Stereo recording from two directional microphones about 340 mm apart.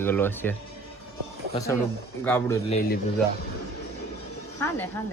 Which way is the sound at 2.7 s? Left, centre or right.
Left.